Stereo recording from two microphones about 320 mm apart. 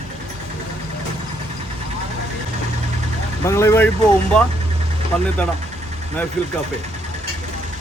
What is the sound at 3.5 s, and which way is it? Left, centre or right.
Speech, centre.